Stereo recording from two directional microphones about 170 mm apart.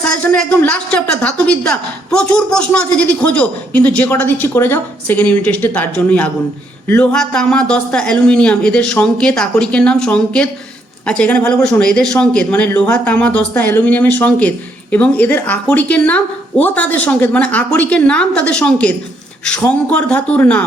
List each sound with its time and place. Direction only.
0.2 s a woman's voice: 10° left (ahead or behind)